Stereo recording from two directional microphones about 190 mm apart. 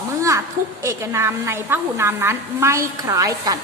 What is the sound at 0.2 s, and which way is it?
A woman's voice, 15° right (ahead or behind).